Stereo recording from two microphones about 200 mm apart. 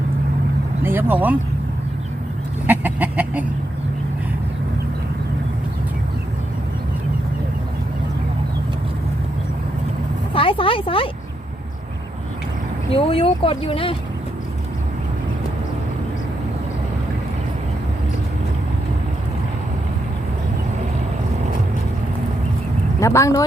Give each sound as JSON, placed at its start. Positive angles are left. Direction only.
{"t": 0.8, "sound": "speech", "side_deg": -10}
{"t": 2.6, "sound": "chicken", "side_deg": -10}
{"t": 10.3, "sound": "speech", "side_deg": 25}
{"t": 12.9, "sound": "speech", "side_deg": 30}
{"t": 23.0, "sound": "speech", "side_deg": 15}